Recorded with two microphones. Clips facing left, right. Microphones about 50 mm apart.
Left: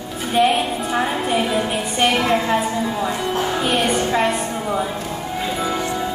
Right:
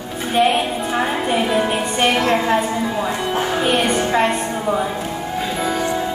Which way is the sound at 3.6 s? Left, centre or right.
Centre.